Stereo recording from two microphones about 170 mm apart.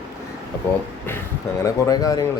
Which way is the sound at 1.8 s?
20° left (ahead or behind).